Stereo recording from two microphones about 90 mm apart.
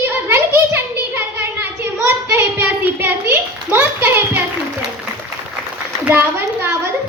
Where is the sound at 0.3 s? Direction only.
25° right (ahead or behind).